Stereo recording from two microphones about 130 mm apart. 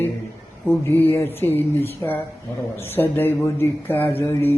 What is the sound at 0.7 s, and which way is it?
Speech, 15° left (ahead or behind).